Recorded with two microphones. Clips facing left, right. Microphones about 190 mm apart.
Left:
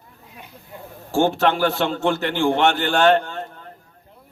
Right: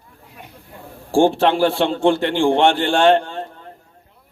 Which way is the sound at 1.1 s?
30° right (ahead or behind).